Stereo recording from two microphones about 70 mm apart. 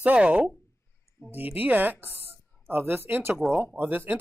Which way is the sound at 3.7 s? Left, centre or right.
Right.